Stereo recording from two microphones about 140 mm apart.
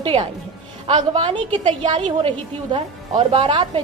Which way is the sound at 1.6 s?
55° right (ahead or behind).